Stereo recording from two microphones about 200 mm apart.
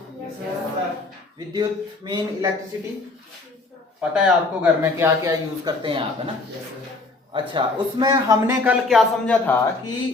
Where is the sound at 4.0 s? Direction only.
5° right (ahead or behind); by 6.0 s 20° right (ahead or behind).